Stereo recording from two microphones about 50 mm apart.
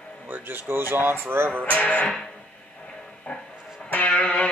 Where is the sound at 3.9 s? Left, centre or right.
Left.